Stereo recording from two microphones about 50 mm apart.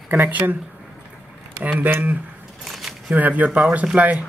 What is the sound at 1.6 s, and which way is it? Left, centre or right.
Speech, right.